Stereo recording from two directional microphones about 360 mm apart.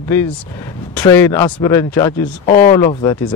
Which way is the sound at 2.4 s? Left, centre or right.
Left.